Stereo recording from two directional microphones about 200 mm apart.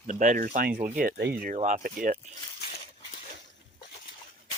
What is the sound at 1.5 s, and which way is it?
Speech, 40° right (ahead or behind).